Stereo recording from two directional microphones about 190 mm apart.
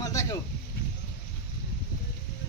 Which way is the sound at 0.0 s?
15° left (ahead or behind).